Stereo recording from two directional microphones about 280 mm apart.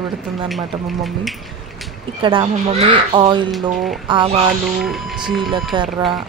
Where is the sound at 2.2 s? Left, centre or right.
Centre.